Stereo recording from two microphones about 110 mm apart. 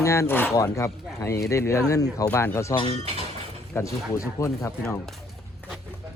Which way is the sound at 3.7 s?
30° left (ahead or behind).